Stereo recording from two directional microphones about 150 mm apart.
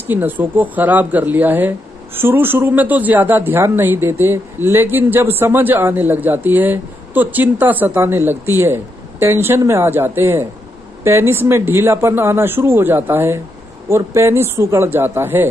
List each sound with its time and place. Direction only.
0.0 s speech: 10° right (ahead or behind)